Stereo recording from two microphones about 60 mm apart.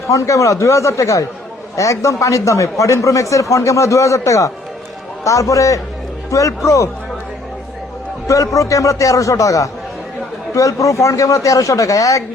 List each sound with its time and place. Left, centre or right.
0.1 s a man's voice: left
8.3 s a man's voice: left